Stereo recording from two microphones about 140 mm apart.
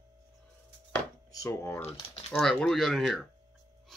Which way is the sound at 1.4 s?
20° left (ahead or behind).